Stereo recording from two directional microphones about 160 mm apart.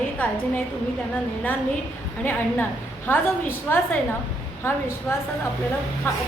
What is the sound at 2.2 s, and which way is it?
A woman's voice, 15° left (ahead or behind).